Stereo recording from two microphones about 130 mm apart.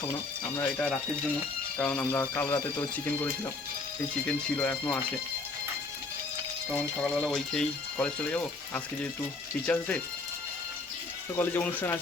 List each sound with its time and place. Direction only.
0.5 s speech: 15° left (ahead or behind)
4.5 s speech: 15° left (ahead or behind)
6.7 s speech: 10° left (ahead or behind)
11.3 s speech: 15° left (ahead or behind)